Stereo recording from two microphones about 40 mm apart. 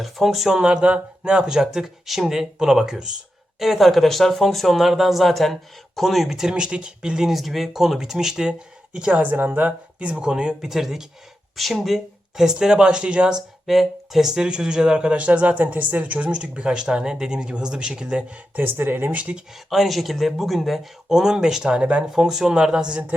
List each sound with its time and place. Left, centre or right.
0.0 s speech: centre
0.6 s speech: right
3.6 s speech: centre
6.5 s speech: right
7.3 s speech: centre; by 9.1 s right
9.1 s speech: right
10.0 s speech: right
10.7 s speech: centre
11.8 s speech: centre
13.7 s speech: centre; by 18.3 s right
18.5 s speech: right
19.1 s speech: right
19.5 s speech: centre; by 22.0 s right
22.1 s speech: centre